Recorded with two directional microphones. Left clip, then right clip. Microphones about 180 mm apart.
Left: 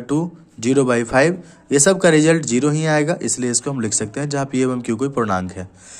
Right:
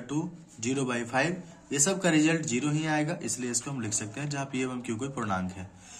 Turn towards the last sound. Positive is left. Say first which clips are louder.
# left 12 dB
turn(degrees=50)  # may be behind; listen again after turning